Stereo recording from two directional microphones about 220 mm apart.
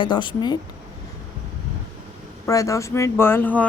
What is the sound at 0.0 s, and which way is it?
Speech, 20° left (ahead or behind).